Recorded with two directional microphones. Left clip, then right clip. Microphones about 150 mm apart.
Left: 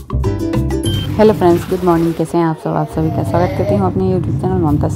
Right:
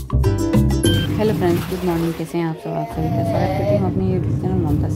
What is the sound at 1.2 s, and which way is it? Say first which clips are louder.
A woman's voice: left 13 dB; 30° left (ahead or behind).